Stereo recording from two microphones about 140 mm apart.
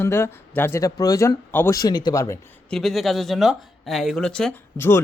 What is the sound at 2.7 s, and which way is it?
Speech, centre (ahead or behind).